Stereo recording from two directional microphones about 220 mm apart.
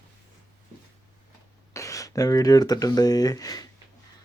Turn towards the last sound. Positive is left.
turn(degrees=15)  # may be behind; listen again after turning